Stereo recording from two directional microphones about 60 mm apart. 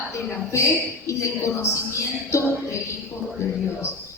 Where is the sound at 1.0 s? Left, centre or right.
Left.